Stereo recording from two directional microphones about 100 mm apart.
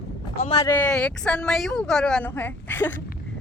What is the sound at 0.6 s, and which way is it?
A woman's voice, 20° left (ahead or behind).